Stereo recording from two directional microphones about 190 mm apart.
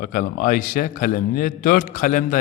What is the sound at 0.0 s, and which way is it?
A man's voice, 45° left (ahead or behind).